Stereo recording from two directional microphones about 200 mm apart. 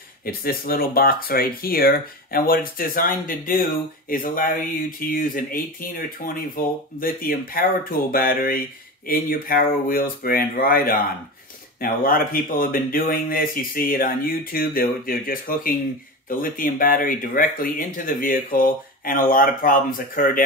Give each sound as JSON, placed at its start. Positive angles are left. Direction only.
{"t": 0.2, "sound": "speech", "side_deg": 45}